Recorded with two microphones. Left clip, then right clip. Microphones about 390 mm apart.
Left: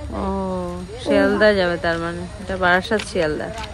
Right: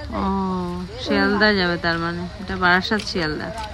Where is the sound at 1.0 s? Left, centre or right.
Centre.